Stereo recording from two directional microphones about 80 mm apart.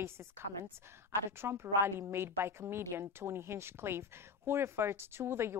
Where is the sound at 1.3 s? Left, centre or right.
Right.